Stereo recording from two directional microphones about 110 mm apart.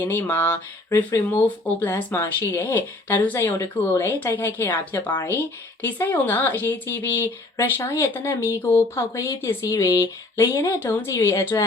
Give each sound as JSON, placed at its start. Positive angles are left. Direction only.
{"t": 0.0, "sound": "speech", "side_deg": 25}
{"t": 9.6, "sound": "speech", "side_deg": 30}